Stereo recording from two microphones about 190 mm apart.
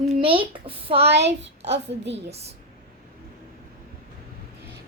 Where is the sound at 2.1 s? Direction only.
35° right (ahead or behind).